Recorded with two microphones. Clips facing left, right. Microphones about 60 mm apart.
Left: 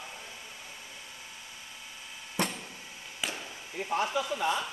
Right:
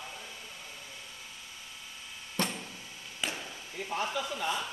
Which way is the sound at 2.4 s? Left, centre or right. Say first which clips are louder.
Left 1 dB; centre.